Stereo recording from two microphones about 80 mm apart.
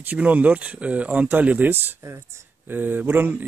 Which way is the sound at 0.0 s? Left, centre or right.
Right.